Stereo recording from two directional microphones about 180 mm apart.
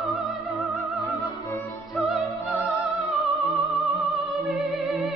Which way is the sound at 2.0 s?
Centre (ahead or behind).